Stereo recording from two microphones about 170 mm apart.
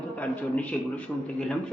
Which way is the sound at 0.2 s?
10° left (ahead or behind).